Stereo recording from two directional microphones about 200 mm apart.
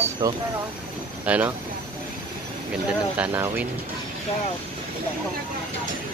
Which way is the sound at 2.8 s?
5° right (ahead or behind).